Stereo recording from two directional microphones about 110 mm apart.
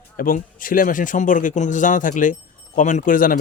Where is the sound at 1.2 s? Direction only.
90° left.